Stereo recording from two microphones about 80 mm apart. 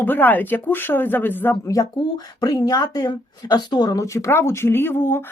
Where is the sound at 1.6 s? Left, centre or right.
Left.